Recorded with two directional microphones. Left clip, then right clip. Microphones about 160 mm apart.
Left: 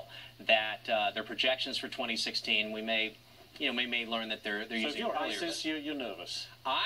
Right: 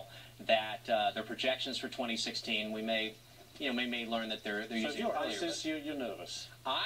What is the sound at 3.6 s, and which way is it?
Speech, 15° left (ahead or behind).